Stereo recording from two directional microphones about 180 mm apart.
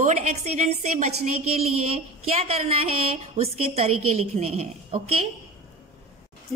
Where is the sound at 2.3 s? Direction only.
35° right (ahead or behind).